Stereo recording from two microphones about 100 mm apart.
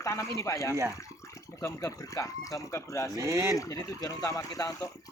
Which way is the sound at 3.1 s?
30° right (ahead or behind).